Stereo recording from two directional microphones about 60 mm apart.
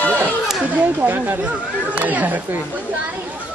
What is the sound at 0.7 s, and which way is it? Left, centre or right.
Speech, right.